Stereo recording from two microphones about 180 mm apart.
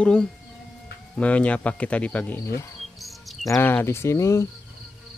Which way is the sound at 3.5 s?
10° left (ahead or behind).